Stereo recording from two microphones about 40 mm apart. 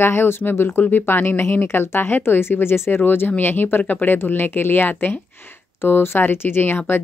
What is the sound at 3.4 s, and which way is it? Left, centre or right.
Speech, left.